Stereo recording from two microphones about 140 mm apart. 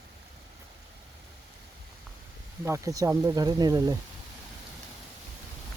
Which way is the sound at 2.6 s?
20° right (ahead or behind).